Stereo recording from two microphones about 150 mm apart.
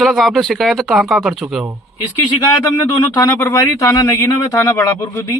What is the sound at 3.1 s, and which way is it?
Speech, 15° left (ahead or behind).